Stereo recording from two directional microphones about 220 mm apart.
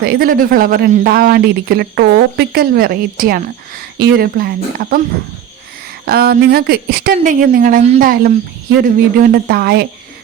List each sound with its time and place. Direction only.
0.0 s speech: 45° right (ahead or behind)
6.1 s a woman's voice: 45° right (ahead or behind)